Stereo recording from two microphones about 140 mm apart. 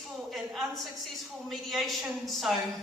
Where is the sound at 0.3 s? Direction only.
Centre (ahead or behind).